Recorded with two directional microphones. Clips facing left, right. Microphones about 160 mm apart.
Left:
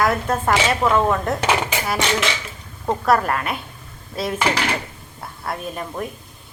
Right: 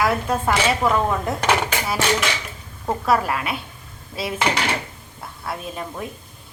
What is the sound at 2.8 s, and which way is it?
A woman's voice, 5° right (ahead or behind).